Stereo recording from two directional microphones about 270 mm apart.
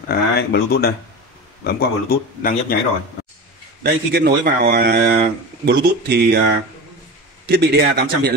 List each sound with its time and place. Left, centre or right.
0.1 s speech: left
3.8 s a man's voice: right
7.4 s a man's voice: right